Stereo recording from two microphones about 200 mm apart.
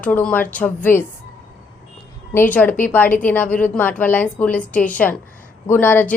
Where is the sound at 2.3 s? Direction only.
10° left (ahead or behind).